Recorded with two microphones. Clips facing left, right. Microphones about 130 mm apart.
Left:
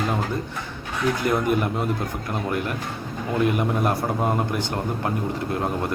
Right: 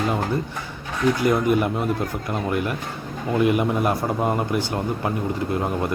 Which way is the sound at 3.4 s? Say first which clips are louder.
Right 2 dB; 5° right (ahead or behind).